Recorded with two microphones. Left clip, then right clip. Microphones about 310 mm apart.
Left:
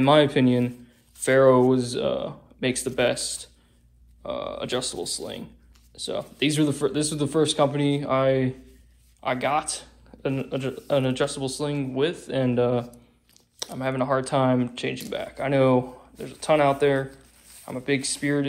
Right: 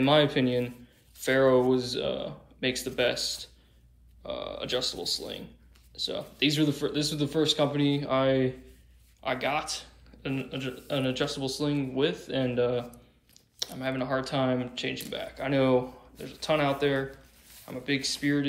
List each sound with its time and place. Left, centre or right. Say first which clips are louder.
0.0 s a man's voice: left 5 dB; centre
5.9 s a man's voice: left 2 dB; centre